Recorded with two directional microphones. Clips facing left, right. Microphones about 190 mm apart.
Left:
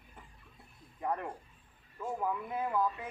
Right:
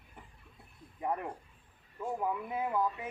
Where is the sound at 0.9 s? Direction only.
15° right (ahead or behind).